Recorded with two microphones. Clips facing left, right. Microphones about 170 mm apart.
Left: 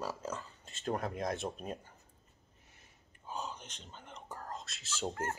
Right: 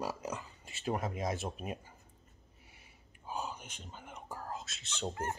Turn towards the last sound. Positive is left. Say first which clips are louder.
# even
turn(degrees=0)  # may be behind; listen again after turning